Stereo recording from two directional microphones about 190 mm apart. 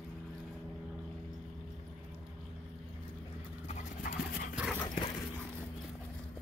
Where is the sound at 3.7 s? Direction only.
45° left (ahead or behind).